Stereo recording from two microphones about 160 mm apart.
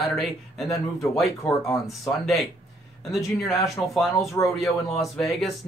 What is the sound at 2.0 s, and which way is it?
Speech, centre (ahead or behind).